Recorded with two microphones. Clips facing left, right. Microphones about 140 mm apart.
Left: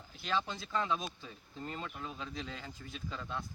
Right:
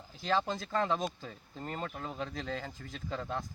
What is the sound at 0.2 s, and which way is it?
Speech, 35° right (ahead or behind).